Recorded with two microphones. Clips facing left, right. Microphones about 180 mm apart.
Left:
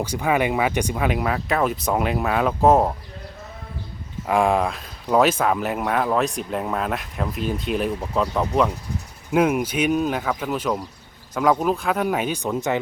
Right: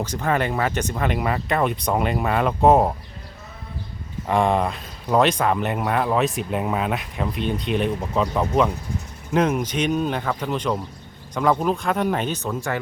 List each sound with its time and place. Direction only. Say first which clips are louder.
0.0 s speech: left 2 dB; 10° left (ahead or behind)
4.3 s speech: left 1 dB; 5° left (ahead or behind); by 12.8 s 20° left (ahead or behind)